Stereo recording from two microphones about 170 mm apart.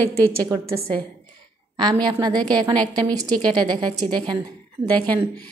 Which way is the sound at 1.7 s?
25° right (ahead or behind).